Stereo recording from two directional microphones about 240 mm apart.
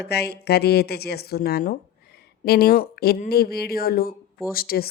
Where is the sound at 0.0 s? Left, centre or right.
Left.